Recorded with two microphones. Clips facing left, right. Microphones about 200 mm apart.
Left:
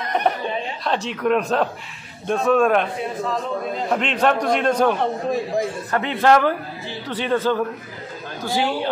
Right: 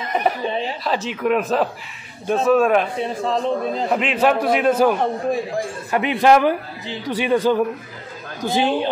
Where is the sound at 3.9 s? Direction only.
5° right (ahead or behind).